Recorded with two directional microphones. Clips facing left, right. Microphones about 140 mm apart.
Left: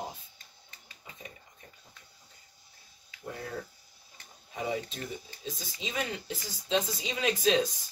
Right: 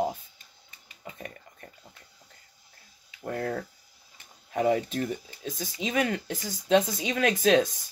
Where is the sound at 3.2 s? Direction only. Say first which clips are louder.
Right 8 dB; 65° right (ahead or behind).